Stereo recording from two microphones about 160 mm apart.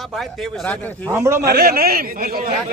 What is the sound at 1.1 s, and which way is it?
Speech, 15° right (ahead or behind).